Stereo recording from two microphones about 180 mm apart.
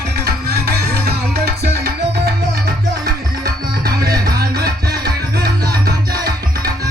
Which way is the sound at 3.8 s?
55° right (ahead or behind).